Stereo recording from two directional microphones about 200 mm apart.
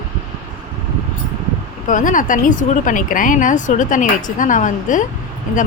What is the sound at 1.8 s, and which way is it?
Speech, 40° left (ahead or behind).